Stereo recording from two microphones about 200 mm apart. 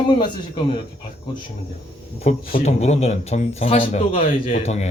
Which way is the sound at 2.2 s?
35° left (ahead or behind).